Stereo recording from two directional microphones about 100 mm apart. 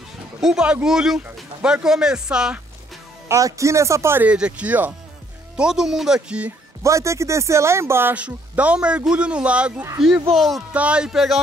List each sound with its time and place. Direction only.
0.4 s speech: 5° right (ahead or behind)
3.3 s speech: 30° right (ahead or behind)
4.2 s speech: 10° right (ahead or behind)
6.8 s speech: 30° right (ahead or behind); by 10.6 s centre (ahead or behind)
10.7 s speech: 10° right (ahead or behind)